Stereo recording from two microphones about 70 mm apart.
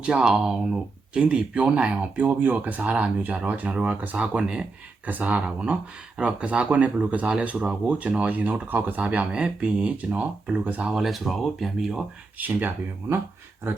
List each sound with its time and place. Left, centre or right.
0.0 s speech: centre
11.0 s speech: centre
12.4 s speech: right